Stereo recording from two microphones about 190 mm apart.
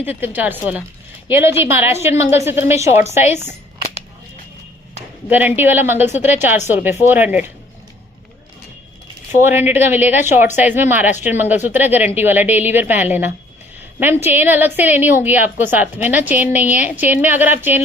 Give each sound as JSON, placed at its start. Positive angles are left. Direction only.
{"t": 0.0, "sound": "a woman's voice", "side_deg": -10}
{"t": 3.2, "sound": "a woman's voice", "side_deg": 35}
{"t": 5.3, "sound": "a woman's voice", "side_deg": -10}
{"t": 9.3, "sound": "a woman's voice", "side_deg": -10}